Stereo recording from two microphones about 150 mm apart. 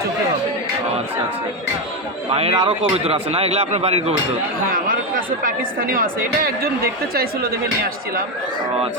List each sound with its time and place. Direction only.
2.3 s speech: 40° right (ahead or behind)
5.4 s speech: 70° right (ahead or behind)
7.1 s speech: 90° right